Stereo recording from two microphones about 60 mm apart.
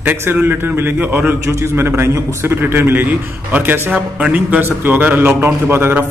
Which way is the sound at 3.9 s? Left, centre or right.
Right.